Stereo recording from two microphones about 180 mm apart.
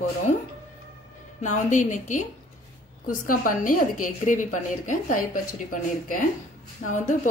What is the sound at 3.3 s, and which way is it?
A woman's voice, 50° left (ahead or behind).